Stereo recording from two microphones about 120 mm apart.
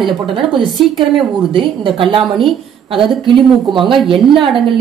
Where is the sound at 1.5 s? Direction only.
45° right (ahead or behind).